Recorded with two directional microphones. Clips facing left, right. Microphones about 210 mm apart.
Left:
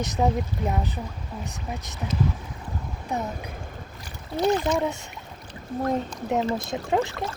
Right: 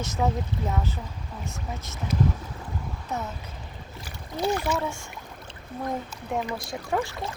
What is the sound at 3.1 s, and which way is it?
Speech, 15° left (ahead or behind).